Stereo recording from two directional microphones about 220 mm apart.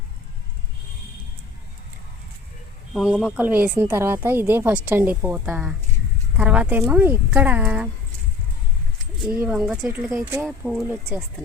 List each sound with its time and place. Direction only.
2.9 s speech: 5° right (ahead or behind)
9.4 s speech: 5° right (ahead or behind)